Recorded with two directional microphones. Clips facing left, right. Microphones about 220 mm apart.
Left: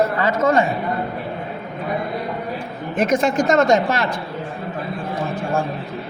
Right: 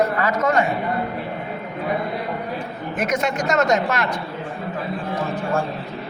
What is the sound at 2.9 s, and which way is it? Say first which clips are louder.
A woman's voice: left 5 dB; 30° left (ahead or behind).